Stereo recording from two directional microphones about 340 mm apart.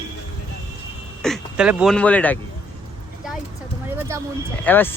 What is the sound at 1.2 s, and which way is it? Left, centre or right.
Speech, centre.